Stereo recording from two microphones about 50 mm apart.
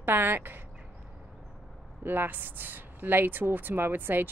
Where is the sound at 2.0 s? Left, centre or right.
Right.